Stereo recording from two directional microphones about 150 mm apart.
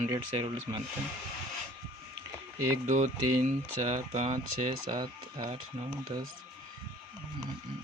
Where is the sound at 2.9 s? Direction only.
50° right (ahead or behind).